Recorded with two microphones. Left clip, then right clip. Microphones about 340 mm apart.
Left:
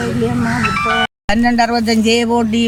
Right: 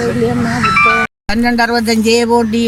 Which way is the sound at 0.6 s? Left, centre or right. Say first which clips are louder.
Right 6 dB; left.